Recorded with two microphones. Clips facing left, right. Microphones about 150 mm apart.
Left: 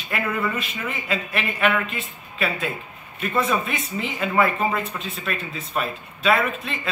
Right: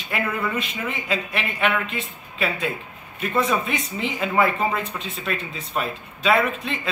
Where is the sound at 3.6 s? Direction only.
25° right (ahead or behind).